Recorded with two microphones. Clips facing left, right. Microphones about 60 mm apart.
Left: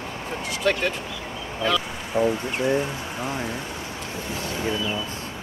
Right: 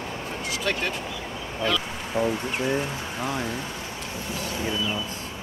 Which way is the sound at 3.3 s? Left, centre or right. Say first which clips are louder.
Right 1 dB; left.